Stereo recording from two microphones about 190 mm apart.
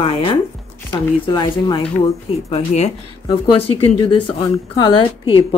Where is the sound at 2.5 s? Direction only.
35° left (ahead or behind).